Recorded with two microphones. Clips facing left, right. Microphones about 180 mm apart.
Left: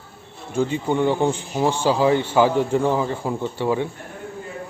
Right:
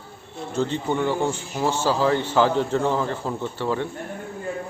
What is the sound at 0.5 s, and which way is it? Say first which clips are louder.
A man's voice: left 3 dB; 10° left (ahead or behind).